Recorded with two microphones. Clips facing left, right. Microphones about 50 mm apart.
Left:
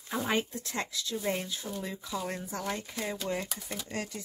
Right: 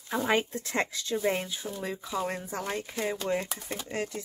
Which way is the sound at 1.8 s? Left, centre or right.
Right.